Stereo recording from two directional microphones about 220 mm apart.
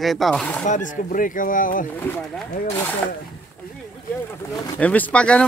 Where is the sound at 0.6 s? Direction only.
35° left (ahead or behind).